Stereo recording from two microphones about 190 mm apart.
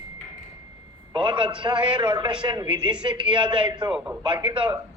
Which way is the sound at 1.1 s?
25° right (ahead or behind).